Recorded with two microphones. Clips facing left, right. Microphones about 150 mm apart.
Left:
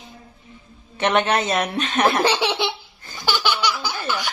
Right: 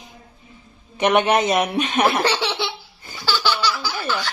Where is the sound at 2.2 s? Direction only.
20° left (ahead or behind).